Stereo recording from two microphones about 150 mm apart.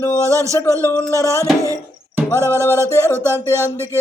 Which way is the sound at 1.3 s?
20° right (ahead or behind).